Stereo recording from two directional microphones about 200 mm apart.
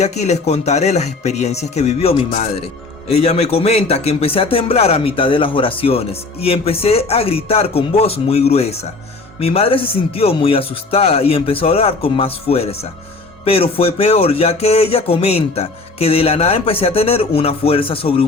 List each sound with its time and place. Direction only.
0.0 s a man's voice: 35° left (ahead or behind)